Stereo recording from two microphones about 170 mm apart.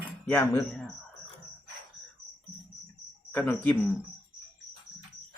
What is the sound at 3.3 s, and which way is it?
Speech, 10° left (ahead or behind).